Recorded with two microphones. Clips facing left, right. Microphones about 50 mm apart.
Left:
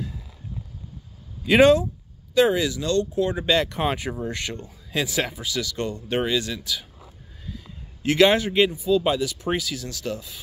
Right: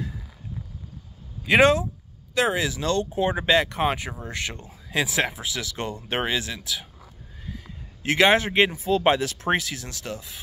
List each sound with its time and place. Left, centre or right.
1.4 s speech: centre
2.7 s speech: right
3.4 s speech: centre
8.0 s a man's voice: right
8.8 s speech: right
9.5 s a man's voice: right